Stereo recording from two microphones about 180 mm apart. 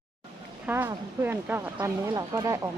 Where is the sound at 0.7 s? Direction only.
10° right (ahead or behind).